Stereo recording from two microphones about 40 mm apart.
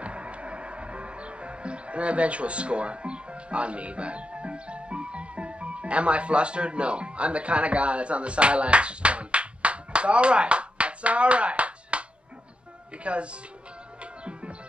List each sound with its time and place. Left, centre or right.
0.0 s music: right
13.0 s speech: right